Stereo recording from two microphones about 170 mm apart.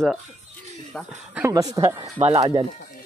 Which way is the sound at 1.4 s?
20° right (ahead or behind).